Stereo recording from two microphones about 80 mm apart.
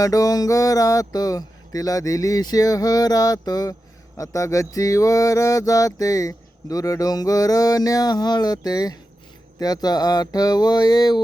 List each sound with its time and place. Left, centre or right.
0.0 s mantra: left
4.2 s mantra: left
9.6 s a sound: left